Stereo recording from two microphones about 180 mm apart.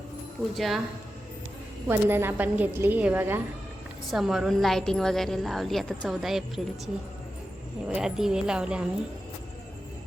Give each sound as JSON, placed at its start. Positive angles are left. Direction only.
{"t": 0.5, "sound": "a woman's voice", "side_deg": 0}
{"t": 1.9, "sound": "a woman's voice", "side_deg": -10}
{"t": 7.9, "sound": "a woman's voice", "side_deg": -5}